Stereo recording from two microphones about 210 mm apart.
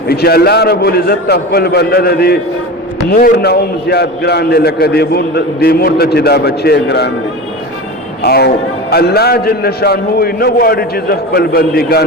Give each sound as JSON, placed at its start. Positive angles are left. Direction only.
{"t": 0.1, "sound": "a man's voice", "side_deg": 50}
{"t": 8.3, "sound": "a man's voice", "side_deg": 50}